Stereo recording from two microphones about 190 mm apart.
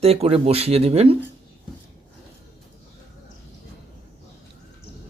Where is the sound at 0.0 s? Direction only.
35° right (ahead or behind).